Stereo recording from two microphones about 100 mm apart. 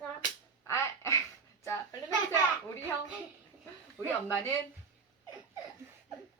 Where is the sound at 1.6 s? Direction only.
30° left (ahead or behind).